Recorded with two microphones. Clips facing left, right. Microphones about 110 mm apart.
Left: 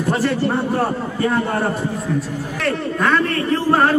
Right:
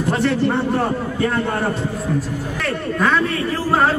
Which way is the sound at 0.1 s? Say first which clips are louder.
Right 1 dB; 5° left (ahead or behind).